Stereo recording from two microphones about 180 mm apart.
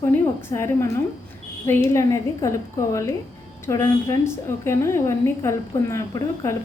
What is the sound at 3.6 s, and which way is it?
A woman's voice, 15° left (ahead or behind).